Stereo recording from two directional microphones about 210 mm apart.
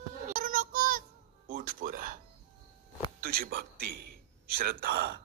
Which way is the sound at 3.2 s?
45° right (ahead or behind).